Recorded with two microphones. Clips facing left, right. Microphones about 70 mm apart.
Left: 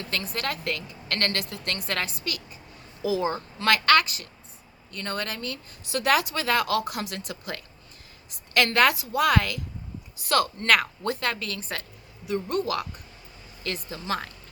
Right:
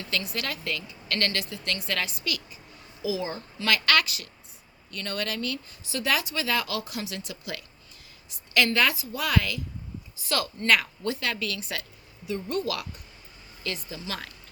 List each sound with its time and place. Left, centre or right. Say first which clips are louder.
0.0 s speech: left 1 dB; left
5.9 s speech: left 4 dB; left